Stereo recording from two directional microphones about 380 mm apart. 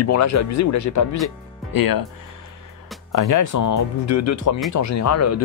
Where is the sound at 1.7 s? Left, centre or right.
Left.